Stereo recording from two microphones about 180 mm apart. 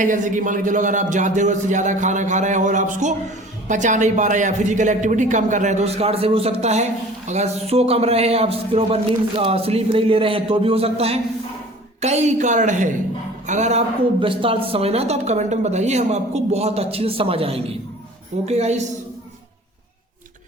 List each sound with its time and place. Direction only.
0.0 s speech: 45° right (ahead or behind)